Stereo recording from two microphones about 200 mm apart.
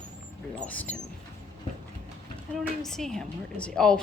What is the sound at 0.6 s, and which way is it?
Speech, 5° left (ahead or behind).